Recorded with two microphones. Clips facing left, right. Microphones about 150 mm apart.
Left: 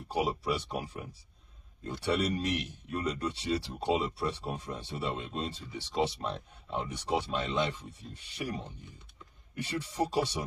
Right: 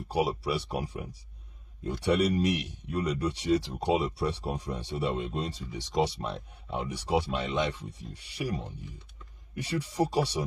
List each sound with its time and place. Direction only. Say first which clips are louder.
0.1 s speech: right 2 dB; 10° right (ahead or behind)
9.6 s speech: right 3 dB; 15° right (ahead or behind)